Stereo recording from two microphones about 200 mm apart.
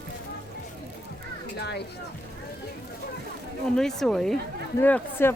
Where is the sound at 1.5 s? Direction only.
55° left (ahead or behind).